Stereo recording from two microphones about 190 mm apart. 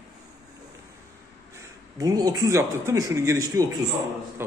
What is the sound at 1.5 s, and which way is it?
A man's voice, 20° right (ahead or behind).